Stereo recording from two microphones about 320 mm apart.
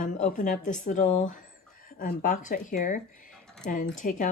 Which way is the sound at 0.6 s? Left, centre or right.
Left.